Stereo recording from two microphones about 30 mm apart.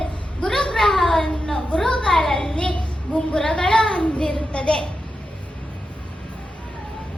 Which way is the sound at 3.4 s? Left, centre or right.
Left.